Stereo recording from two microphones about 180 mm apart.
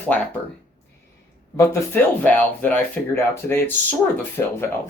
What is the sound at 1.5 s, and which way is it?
Speech, 15° left (ahead or behind).